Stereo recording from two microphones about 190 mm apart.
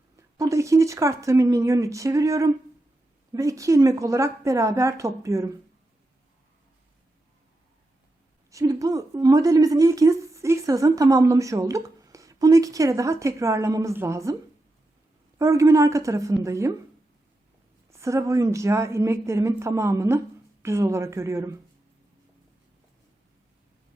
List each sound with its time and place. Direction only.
0.2 s a woman's voice: 15° right (ahead or behind)
8.4 s a woman's voice: 15° right (ahead or behind)
15.4 s a woman's voice: 15° right (ahead or behind)
17.9 s a woman's voice: 15° right (ahead or behind)